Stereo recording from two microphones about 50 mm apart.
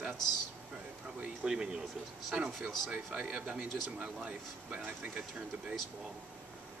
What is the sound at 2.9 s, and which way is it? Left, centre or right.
Speech, right.